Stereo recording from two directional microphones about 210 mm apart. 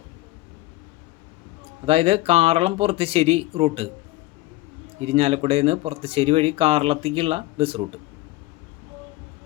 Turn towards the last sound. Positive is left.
turn(degrees=-25)  # may be behind; listen again after turning